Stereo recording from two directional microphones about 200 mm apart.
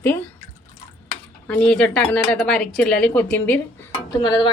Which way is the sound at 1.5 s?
5° left (ahead or behind).